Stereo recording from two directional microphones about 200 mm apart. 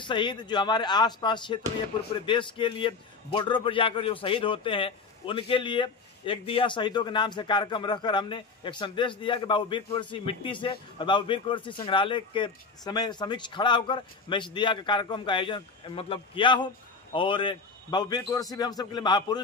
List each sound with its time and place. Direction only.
0.0 s a man's voice: 25° left (ahead or behind)